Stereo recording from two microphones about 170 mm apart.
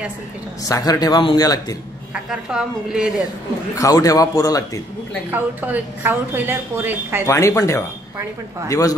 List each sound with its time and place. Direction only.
0.7 s a man's voice: 20° left (ahead or behind)
2.2 s speech: 5° right (ahead or behind)
3.7 s a man's voice: 20° left (ahead or behind)
5.3 s a woman's voice: 10° right (ahead or behind)
7.2 s a man's voice: 15° left (ahead or behind)